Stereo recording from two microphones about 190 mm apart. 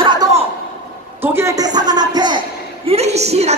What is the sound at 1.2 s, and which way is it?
A woman's voice, 15° right (ahead or behind).